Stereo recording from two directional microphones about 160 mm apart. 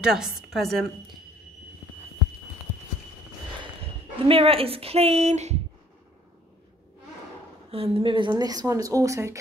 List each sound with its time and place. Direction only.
0.0 s a woman's voice: 5° right (ahead or behind)
4.2 s a woman's voice: 35° right (ahead or behind)
7.7 s speech: 35° right (ahead or behind); by 9.4 s 20° right (ahead or behind)